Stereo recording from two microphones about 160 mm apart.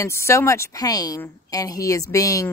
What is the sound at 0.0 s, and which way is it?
Speech, 20° left (ahead or behind).